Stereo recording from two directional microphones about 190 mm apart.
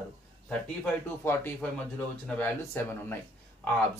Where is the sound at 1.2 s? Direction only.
10° left (ahead or behind).